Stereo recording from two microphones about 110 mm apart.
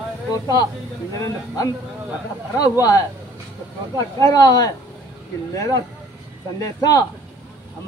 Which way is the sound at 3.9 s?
35° left (ahead or behind).